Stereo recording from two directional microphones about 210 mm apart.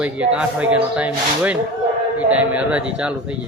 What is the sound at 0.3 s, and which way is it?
A man's voice, 5° right (ahead or behind).